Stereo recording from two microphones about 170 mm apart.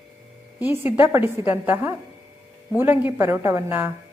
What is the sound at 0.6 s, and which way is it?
A woman's voice, 15° right (ahead or behind).